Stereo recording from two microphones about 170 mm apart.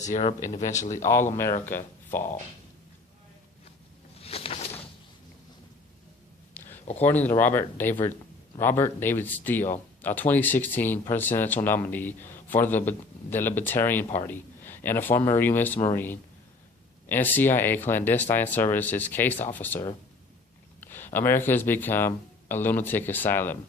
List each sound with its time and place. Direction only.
0.0 s speech: 45° left (ahead or behind)
1.6 s speech: 10° left (ahead or behind)
4.2 s a sound: 35° left (ahead or behind)
7.0 s a man's voice: 10° left (ahead or behind)
20.8 s a man's voice: 10° left (ahead or behind)